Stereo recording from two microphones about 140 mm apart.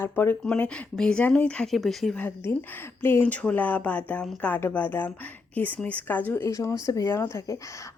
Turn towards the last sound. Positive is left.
turn(degrees=20)  # may be behind; listen again after turning